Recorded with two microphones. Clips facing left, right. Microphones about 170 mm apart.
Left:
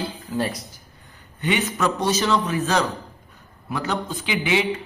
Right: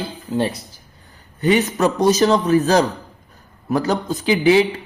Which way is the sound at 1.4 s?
40° right (ahead or behind).